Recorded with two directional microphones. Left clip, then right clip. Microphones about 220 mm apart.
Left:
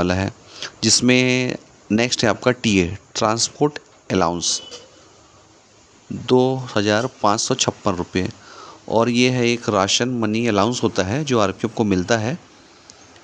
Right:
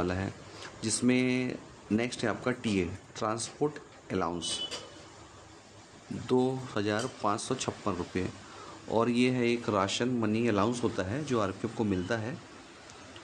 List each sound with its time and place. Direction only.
0.0 s speech: 45° left (ahead or behind)
6.2 s speech: 40° left (ahead or behind)